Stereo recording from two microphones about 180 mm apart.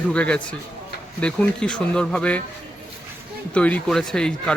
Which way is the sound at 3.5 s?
5° left (ahead or behind).